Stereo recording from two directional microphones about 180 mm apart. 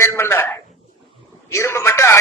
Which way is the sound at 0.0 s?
15° left (ahead or behind).